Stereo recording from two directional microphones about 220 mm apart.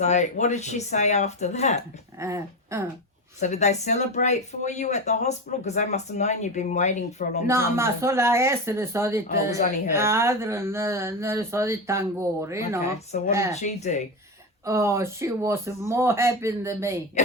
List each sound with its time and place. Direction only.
0.0 s speech: 30° left (ahead or behind)
2.1 s speech: 15° right (ahead or behind)
3.4 s speech: 30° left (ahead or behind)
7.4 s speech: 10° right (ahead or behind)
13.1 s speech: 35° left (ahead or behind)
14.6 s speech: 10° right (ahead or behind)